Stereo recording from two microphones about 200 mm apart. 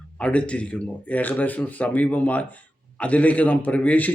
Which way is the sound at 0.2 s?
5° left (ahead or behind).